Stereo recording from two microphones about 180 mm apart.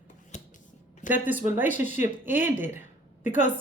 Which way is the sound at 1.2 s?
10° right (ahead or behind).